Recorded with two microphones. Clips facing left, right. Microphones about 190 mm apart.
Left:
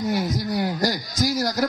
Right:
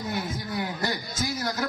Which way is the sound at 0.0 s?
40° left (ahead or behind).